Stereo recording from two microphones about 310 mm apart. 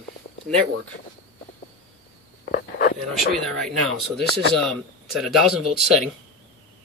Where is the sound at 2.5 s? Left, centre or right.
Left.